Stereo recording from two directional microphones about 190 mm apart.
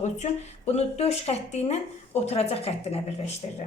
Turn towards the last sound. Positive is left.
turn(degrees=30)  # may be behind; listen again after turning